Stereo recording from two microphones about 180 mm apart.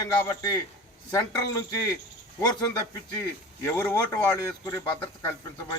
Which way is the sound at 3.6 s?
15° left (ahead or behind).